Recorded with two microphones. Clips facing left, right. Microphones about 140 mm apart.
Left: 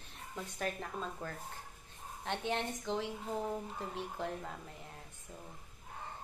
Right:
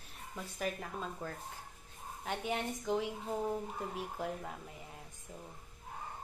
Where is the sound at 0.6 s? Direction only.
5° right (ahead or behind).